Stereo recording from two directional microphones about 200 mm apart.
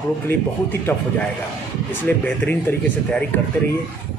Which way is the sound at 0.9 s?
5° left (ahead or behind).